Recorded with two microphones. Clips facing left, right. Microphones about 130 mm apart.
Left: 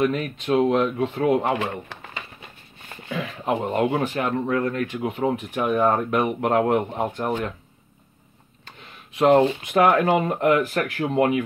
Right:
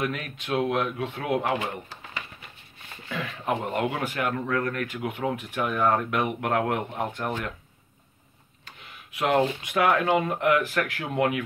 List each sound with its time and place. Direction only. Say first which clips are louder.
0.0 s speech: left 8 dB; 30° left (ahead or behind)
1.9 s bird: left 4 dB; 65° left (ahead or behind)
3.4 s speech: left 5 dB; 30° left (ahead or behind)
8.6 s speech: left 2 dB; 35° left (ahead or behind)